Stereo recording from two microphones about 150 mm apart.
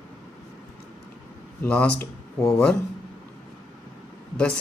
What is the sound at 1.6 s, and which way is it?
Speech, 10° left (ahead or behind).